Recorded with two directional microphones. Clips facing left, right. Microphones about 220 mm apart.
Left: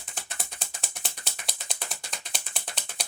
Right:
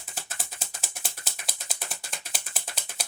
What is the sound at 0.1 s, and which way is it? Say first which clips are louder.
Gears: even; 5° right (ahead or behind).